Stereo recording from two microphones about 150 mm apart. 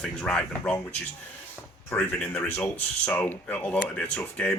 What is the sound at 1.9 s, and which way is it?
Speech, 10° left (ahead or behind).